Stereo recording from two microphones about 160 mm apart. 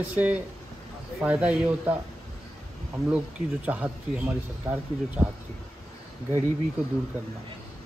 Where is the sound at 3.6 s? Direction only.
10° right (ahead or behind).